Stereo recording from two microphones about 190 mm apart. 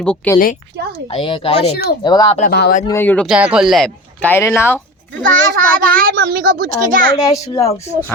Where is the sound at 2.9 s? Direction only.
10° left (ahead or behind).